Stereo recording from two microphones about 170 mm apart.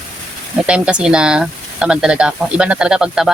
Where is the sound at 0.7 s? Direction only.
5° right (ahead or behind).